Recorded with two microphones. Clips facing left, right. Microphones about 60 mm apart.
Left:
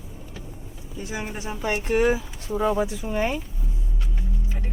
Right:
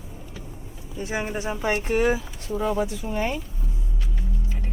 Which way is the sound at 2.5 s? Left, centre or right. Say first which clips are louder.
Left 2 dB; centre.